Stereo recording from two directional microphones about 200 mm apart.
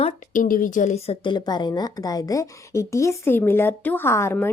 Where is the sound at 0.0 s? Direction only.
45° left (ahead or behind).